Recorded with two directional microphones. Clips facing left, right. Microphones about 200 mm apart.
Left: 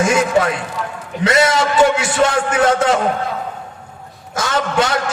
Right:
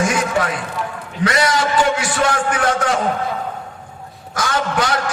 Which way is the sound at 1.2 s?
25° left (ahead or behind).